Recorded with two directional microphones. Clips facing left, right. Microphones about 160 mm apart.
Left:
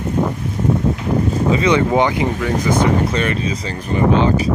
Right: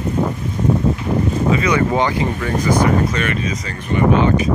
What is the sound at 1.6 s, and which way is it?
Speech, 20° left (ahead or behind).